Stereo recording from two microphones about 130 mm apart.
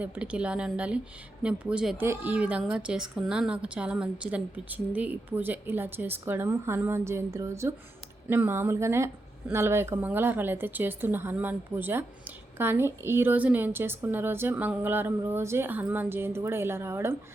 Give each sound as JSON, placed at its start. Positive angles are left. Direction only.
{"t": 0.0, "sound": "a woman's voice", "side_deg": -10}